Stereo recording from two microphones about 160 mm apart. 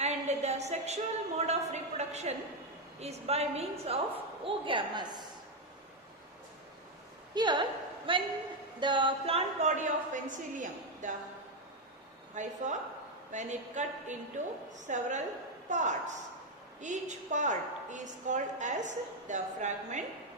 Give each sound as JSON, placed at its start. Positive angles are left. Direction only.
{"t": 0.0, "sound": "a sound", "side_deg": -45}
{"t": 1.4, "sound": "a woman's voice", "side_deg": -45}
{"t": 7.3, "sound": "a woman's voice", "side_deg": -30}
{"t": 12.3, "sound": "a woman's voice", "side_deg": -50}